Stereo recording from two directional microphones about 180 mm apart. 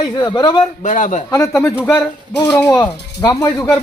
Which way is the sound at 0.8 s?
40° left (ahead or behind).